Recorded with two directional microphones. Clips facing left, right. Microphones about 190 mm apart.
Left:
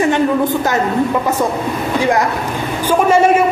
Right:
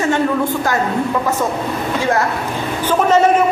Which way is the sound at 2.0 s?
15° left (ahead or behind).